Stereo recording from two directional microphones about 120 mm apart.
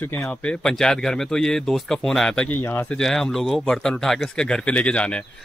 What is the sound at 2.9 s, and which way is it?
Speech, 5° left (ahead or behind).